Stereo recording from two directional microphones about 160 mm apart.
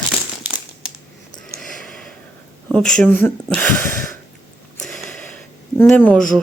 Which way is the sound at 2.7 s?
5° left (ahead or behind).